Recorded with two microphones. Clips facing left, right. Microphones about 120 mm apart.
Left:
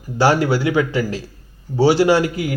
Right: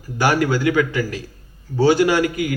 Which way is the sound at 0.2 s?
25° left (ahead or behind).